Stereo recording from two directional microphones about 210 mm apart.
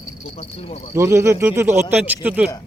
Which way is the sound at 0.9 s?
10° right (ahead or behind).